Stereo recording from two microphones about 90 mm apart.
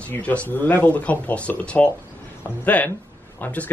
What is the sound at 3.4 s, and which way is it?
Speech, 15° left (ahead or behind).